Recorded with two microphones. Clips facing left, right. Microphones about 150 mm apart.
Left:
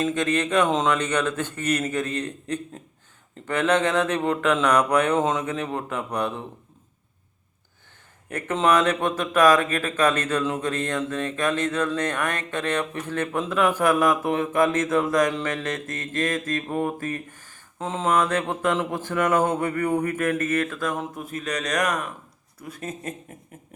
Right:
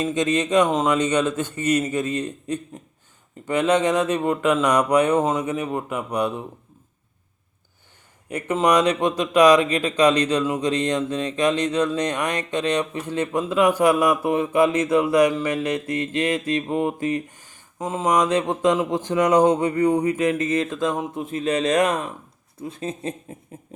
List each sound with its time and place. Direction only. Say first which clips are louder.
0.0 s speech: right 2 dB; 15° right (ahead or behind)
8.3 s speech: right 2 dB; 15° right (ahead or behind)